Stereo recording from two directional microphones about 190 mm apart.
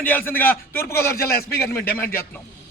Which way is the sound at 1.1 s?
55° left (ahead or behind).